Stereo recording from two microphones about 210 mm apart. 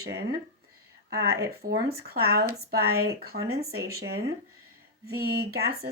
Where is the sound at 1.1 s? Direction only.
50° right (ahead or behind).